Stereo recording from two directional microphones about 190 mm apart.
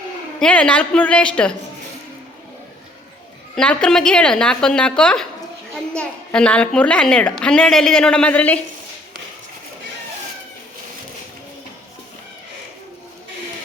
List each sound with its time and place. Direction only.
0.3 s a child's voice: 5° left (ahead or behind)
3.5 s a child's voice: 5° left (ahead or behind)